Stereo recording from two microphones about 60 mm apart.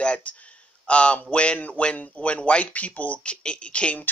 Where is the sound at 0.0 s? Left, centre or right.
Left.